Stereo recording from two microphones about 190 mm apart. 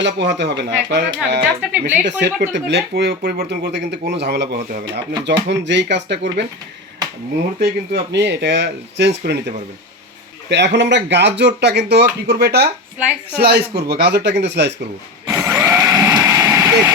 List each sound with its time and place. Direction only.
0.0 s speech: 65° right (ahead or behind)
7.6 s speech: 60° right (ahead or behind)
15.3 s a sound: 15° right (ahead or behind)
16.1 s vehicle: 15° right (ahead or behind)